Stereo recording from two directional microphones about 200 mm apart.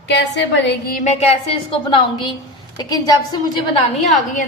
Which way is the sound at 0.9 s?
35° left (ahead or behind).